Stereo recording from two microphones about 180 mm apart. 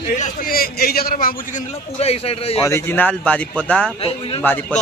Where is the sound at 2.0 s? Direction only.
35° left (ahead or behind).